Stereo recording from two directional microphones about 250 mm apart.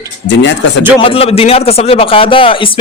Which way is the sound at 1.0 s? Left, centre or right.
Left.